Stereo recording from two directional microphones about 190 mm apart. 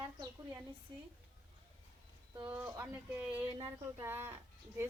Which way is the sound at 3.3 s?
25° right (ahead or behind).